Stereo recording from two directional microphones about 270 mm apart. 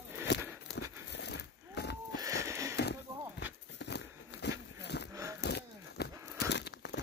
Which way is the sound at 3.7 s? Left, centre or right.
Left.